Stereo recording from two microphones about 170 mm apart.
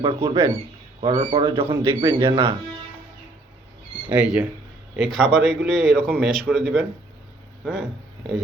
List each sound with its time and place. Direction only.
0.0 s speech: 30° right (ahead or behind)
1.6 s a man's voice: 15° right (ahead or behind)
4.1 s a man's voice: 10° right (ahead or behind)